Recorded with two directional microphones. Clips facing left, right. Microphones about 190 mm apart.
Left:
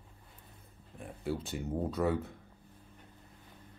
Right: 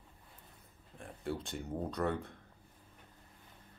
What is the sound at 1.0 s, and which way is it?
Speech, 5° left (ahead or behind).